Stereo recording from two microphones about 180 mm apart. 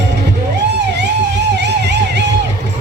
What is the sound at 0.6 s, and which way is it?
Music, 70° right (ahead or behind).